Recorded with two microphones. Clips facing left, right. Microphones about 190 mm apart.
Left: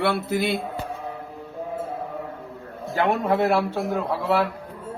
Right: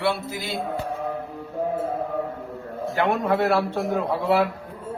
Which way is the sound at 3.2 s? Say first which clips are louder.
Even; 20° left (ahead or behind).